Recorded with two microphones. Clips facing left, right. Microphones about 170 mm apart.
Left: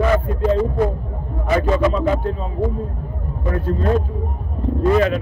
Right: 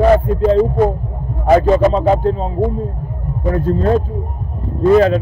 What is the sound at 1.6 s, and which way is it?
Music, 35° right (ahead or behind).